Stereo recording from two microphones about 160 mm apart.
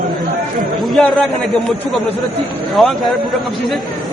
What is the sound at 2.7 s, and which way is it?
Speech, centre (ahead or behind).